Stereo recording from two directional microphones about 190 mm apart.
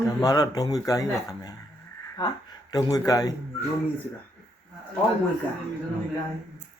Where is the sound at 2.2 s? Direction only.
20° left (ahead or behind).